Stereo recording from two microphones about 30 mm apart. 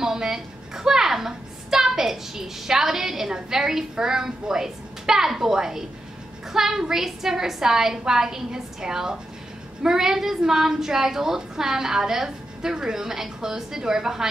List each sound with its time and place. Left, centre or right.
0.0 s a woman's voice: centre